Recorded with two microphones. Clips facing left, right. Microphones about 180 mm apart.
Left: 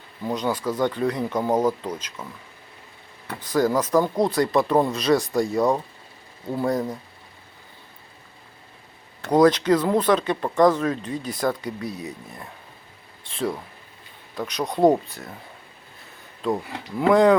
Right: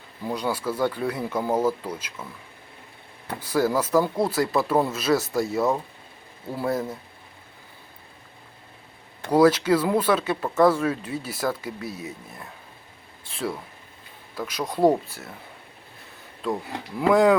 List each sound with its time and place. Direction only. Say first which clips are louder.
0.3 s speech: left 2 dB; 10° right (ahead or behind)
3.4 s speech: left 2 dB; 10° right (ahead or behind)
9.2 s speech: left 1 dB; 5° right (ahead or behind)
16.4 s speech: left 3 dB; centre (ahead or behind)